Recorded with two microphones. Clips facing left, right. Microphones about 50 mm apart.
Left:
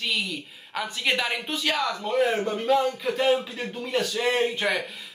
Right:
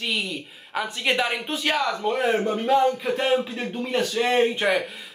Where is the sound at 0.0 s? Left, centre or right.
Centre.